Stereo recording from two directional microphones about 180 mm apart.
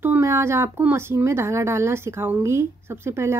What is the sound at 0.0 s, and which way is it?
Speech, 15° right (ahead or behind).